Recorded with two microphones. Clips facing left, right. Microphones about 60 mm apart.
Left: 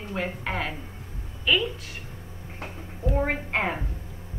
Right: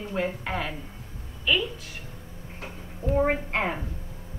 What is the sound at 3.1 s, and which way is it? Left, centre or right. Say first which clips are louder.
Speech: right 3 dB; centre.